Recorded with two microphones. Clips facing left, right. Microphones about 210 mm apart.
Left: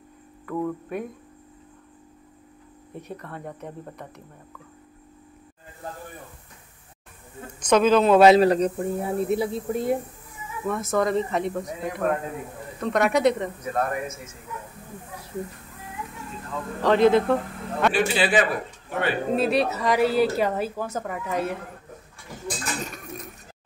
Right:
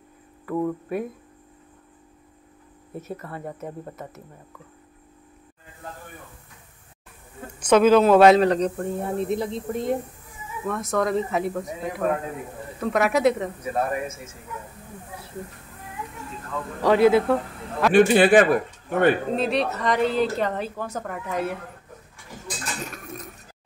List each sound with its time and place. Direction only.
0.5 s speech: 10° right (ahead or behind)
2.9 s speech: 5° right (ahead or behind)
7.6 s speech: 10° right (ahead or behind)
16.8 s speech: 10° right (ahead or behind)
17.9 s a man's voice: 50° right (ahead or behind)
19.3 s speech: 5° left (ahead or behind)